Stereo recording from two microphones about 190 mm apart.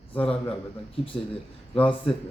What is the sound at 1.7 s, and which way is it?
Speech, 30° left (ahead or behind).